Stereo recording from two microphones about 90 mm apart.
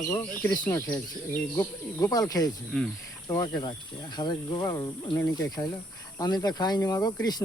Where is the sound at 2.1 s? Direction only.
45° left (ahead or behind).